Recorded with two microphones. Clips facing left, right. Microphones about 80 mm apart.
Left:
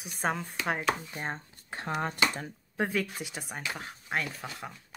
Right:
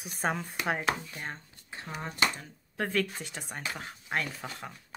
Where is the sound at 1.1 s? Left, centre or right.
Left.